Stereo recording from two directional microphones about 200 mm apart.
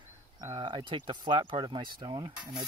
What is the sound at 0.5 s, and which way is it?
Speech, 25° right (ahead or behind).